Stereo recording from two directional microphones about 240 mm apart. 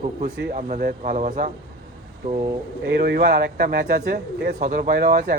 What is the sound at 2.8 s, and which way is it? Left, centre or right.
Speech, right.